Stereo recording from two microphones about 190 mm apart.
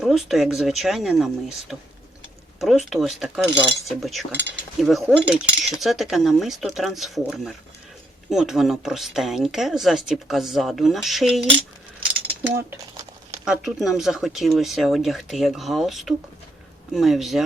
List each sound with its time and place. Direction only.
0.0 s speech: centre (ahead or behind)
3.5 s speech: 25° right (ahead or behind)
3.8 s speech: centre (ahead or behind)
12.4 s speech: 10° right (ahead or behind)